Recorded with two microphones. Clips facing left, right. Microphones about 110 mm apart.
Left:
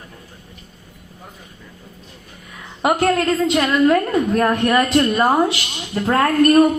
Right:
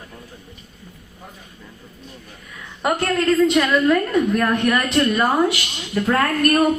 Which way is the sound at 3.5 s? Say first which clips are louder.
Left 2 dB; 30° left (ahead or behind).